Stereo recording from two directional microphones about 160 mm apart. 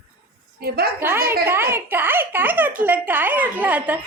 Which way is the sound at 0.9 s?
15° right (ahead or behind).